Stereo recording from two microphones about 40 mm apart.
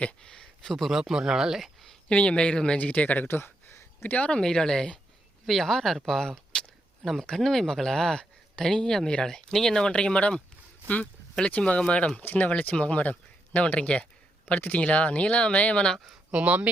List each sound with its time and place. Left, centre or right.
0.0 s speech: left
0.6 s speech: centre
0.9 s speech: centre
2.0 s speech: left
2.7 s speech: left
3.2 s a sound: left
4.1 s speech: left
4.4 s speech: centre
7.0 s speech: centre; by 12.2 s left
12.2 s speech: left
12.5 s speech: left
16.4 s speech: right